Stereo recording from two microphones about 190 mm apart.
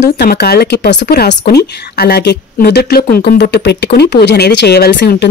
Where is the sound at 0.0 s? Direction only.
60° left (ahead or behind).